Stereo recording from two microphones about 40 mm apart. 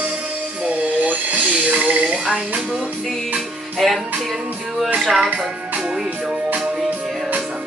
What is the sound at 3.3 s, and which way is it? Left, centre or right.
Music, centre.